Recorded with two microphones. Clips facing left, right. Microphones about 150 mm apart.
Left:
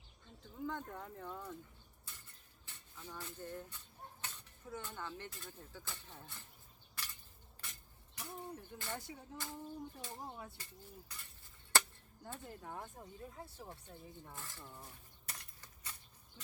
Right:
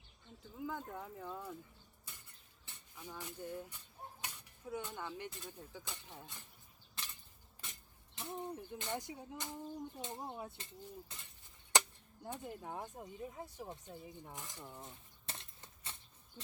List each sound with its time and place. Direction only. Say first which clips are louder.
0.5 s speech: even; 5° right (ahead or behind)
2.6 s speech: right 1 dB; 15° right (ahead or behind)
7.0 s a sound: even; 25° right (ahead or behind)
7.6 s speech: right 1 dB; 25° right (ahead or behind)
11.7 s chop: right 2 dB; 15° right (ahead or behind)
12.2 s speech: right 4 dB; 15° right (ahead or behind)